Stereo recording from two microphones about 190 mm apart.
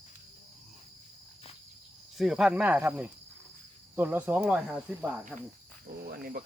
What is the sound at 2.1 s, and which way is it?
Speech, centre (ahead or behind).